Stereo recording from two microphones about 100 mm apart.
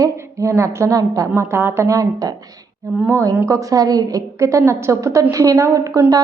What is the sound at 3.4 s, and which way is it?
A woman's voice, 35° right (ahead or behind).